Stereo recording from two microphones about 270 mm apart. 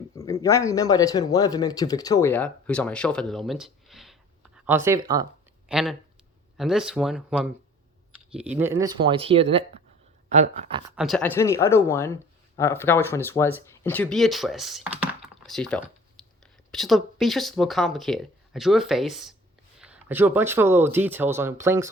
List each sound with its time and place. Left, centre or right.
0.2 s speech: centre
10.9 s speech: centre